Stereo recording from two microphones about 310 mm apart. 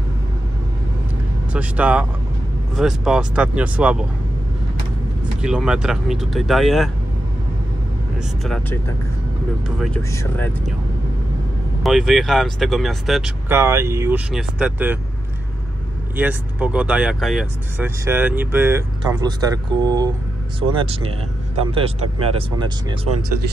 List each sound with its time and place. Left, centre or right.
1.5 s speech: centre
5.4 s speech: centre
8.5 s speech: centre
9.8 s speech: centre
11.8 s speech: centre
16.2 s speech: centre
22.3 s speech: centre